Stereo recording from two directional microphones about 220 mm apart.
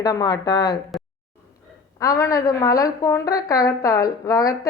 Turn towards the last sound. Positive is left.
turn(degrees=15)  # may be behind; listen again after turning